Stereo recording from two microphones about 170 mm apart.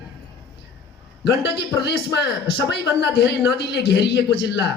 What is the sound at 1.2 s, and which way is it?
A man's voice, 80° left.